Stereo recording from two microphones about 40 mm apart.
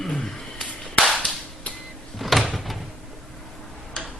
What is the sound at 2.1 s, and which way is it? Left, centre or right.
Door, centre.